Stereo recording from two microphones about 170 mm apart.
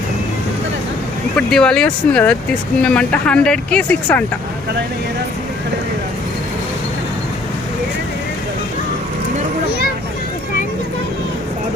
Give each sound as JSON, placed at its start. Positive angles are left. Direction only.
{"t": 1.4, "sound": "speech", "side_deg": 5}